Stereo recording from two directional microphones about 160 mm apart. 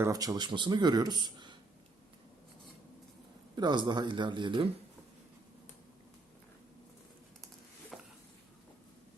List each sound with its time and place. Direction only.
0.0 s speech: 20° right (ahead or behind)
3.5 s speech: 30° right (ahead or behind)
7.9 s a sound: centre (ahead or behind)